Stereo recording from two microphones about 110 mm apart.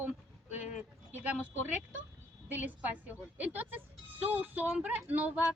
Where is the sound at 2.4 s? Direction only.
15° right (ahead or behind).